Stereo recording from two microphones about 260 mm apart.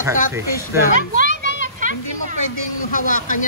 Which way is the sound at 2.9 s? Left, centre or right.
Left.